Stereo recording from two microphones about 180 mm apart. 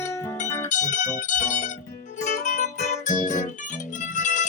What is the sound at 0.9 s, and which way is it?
Music, 45° left (ahead or behind).